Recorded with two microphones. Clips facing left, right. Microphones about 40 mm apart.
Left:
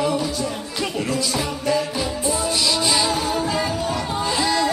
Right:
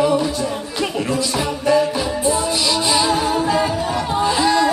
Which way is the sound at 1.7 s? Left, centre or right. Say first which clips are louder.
Right 6 dB; centre.